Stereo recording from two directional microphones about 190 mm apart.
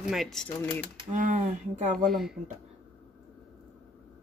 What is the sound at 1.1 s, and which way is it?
Speech, 40° right (ahead or behind).